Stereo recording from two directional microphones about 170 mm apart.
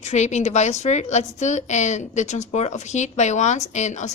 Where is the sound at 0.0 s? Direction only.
40° left (ahead or behind).